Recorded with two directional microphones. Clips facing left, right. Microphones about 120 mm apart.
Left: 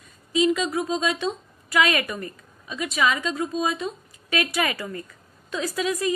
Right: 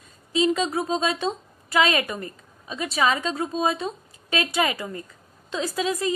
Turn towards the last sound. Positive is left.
turn(degrees=-30)  # may be behind; listen again after turning